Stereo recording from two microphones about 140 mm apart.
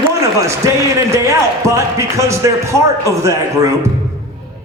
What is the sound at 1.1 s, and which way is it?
A man's voice, 20° right (ahead or behind).